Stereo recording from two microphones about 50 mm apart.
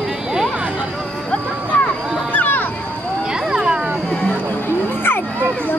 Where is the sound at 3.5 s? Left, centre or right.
Centre.